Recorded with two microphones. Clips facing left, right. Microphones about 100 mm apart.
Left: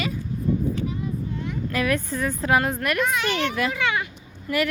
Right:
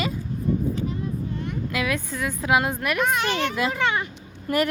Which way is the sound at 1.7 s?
5° right (ahead or behind).